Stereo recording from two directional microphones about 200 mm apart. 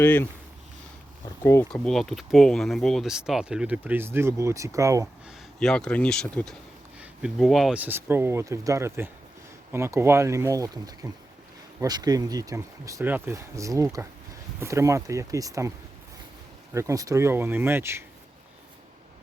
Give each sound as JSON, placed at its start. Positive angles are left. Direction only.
{"t": 0.0, "sound": "speech", "side_deg": 10}
{"t": 1.7, "sound": "speech", "side_deg": 0}
{"t": 5.5, "sound": "speech", "side_deg": 5}
{"t": 16.7, "sound": "speech", "side_deg": -15}